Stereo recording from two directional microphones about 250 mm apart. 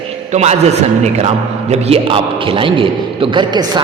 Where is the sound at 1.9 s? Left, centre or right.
Right.